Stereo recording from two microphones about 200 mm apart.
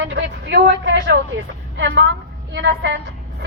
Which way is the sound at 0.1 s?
60° right (ahead or behind).